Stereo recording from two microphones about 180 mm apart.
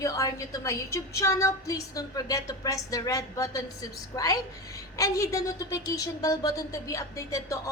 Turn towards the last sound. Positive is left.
turn(degrees=20)  # may be behind; listen again after turning